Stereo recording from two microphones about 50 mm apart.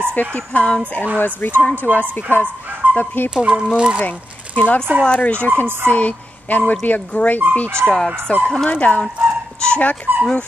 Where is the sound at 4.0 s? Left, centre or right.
Left.